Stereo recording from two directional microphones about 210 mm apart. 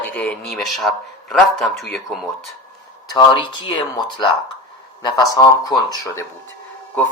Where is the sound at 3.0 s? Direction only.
20° left (ahead or behind).